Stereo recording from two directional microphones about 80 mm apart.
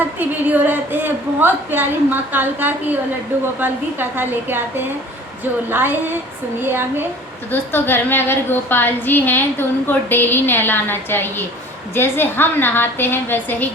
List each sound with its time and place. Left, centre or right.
0.2 s a woman's voice: right
7.5 s a woman's voice: left